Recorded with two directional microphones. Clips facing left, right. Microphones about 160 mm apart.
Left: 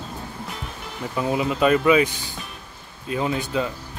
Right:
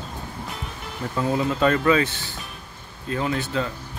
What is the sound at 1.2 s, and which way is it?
Speech, 15° left (ahead or behind).